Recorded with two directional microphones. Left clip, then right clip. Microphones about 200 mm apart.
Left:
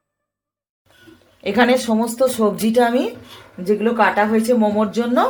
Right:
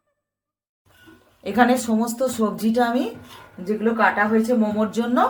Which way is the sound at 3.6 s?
35° left (ahead or behind).